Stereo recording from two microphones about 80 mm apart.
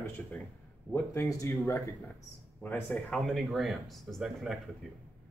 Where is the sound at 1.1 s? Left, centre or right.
Left.